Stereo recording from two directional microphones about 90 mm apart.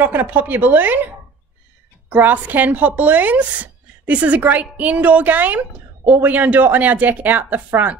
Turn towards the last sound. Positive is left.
turn(degrees=-20)  # may be behind; listen again after turning